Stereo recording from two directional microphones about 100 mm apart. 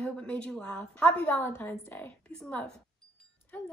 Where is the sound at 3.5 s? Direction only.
15° left (ahead or behind).